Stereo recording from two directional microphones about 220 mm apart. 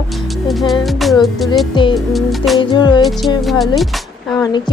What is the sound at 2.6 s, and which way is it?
Speech, 20° left (ahead or behind).